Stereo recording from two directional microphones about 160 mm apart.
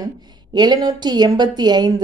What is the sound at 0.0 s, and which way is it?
A woman's voice, 25° right (ahead or behind).